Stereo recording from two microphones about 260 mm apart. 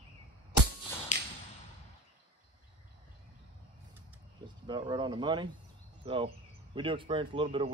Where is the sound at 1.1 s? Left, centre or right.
Left.